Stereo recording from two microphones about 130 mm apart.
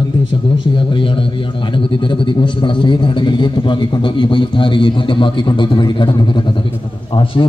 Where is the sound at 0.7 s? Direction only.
40° left (ahead or behind).